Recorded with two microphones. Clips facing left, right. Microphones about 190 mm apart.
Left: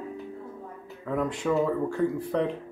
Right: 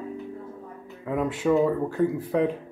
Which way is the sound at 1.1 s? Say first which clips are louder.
Right 3 dB; 5° right (ahead or behind).